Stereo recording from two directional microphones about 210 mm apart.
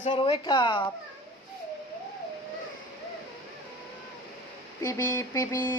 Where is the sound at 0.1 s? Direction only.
20° left (ahead or behind).